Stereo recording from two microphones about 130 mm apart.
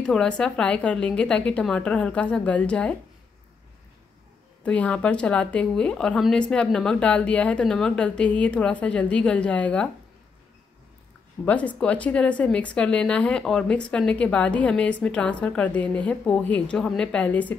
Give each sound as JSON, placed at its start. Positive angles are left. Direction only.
{"t": 0.0, "sound": "a woman's voice", "side_deg": 5}
{"t": 4.6, "sound": "a woman's voice", "side_deg": 10}
{"t": 11.4, "sound": "a woman's voice", "side_deg": 10}